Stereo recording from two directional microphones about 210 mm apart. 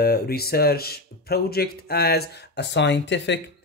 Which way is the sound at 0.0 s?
45° left (ahead or behind).